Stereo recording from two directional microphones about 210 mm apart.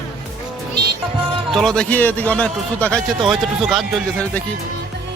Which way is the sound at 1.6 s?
5° left (ahead or behind).